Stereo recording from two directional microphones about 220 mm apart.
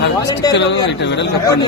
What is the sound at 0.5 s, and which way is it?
Speech, 50° left (ahead or behind).